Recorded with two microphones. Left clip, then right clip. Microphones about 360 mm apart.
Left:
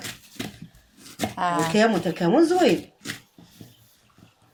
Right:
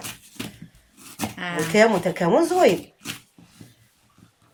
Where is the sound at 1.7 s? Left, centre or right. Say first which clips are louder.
Right 3 dB; right.